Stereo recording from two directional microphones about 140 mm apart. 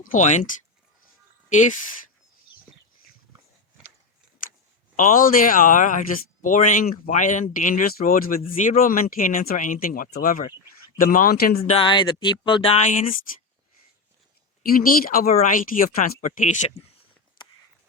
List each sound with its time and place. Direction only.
0.0 s speech: 65° left (ahead or behind)
1.5 s speech: 60° left (ahead or behind)
4.9 s speech: 80° left
8.6 s speech: 70° left (ahead or behind); by 11.6 s 90° left
11.7 s speech: 35° left (ahead or behind)
12.7 s speech: 60° left (ahead or behind)
14.6 s speech: 90° left
15.3 s speech: 60° left (ahead or behind)